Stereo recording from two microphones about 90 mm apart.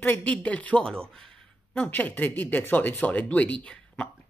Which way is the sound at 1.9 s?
20° left (ahead or behind).